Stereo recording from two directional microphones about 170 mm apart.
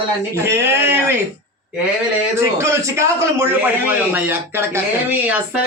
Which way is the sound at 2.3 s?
15° right (ahead or behind).